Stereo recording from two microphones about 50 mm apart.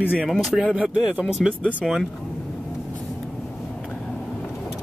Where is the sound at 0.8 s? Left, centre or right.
Centre.